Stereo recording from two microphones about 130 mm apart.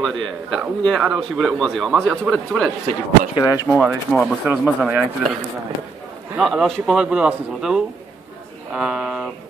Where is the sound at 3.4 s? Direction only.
30° left (ahead or behind).